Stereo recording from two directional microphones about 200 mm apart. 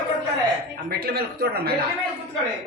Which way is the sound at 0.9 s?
50° right (ahead or behind).